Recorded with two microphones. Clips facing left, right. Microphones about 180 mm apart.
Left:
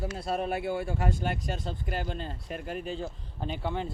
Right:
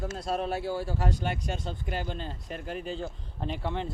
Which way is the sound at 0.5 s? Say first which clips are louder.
Left 1 dB; 60° left (ahead or behind).